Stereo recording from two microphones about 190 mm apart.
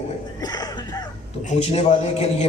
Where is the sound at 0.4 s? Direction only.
20° left (ahead or behind).